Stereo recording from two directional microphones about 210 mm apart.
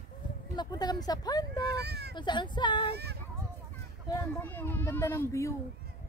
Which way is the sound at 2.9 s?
50° right (ahead or behind).